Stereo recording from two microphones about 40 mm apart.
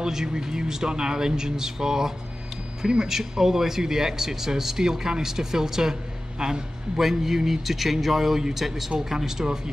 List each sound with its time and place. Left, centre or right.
0.0 s a man's voice: centre
7.0 s a man's voice: centre